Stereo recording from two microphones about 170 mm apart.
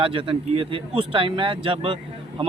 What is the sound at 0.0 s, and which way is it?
Speech, 30° right (ahead or behind).